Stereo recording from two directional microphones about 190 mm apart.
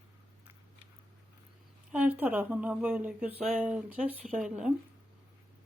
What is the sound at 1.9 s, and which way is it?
Speech, 10° right (ahead or behind).